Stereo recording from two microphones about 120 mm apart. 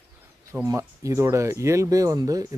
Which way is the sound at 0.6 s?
25° right (ahead or behind).